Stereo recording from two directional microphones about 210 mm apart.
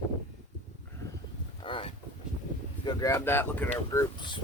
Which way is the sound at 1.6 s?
25° left (ahead or behind).